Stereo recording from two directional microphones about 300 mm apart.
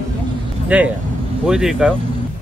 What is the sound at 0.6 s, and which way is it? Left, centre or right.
Speech, centre.